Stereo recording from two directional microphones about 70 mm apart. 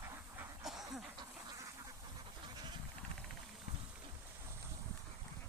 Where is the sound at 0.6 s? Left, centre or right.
Centre.